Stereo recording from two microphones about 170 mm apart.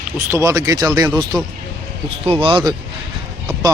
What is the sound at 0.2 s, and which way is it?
Speech, 15° right (ahead or behind).